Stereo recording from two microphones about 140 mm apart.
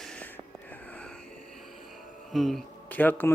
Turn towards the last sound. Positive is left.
turn(degrees=10)  # may be behind; listen again after turning